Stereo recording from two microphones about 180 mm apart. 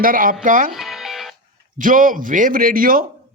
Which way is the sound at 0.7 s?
Centre (ahead or behind).